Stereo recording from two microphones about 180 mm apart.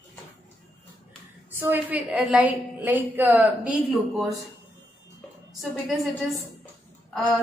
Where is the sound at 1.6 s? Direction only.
10° right (ahead or behind).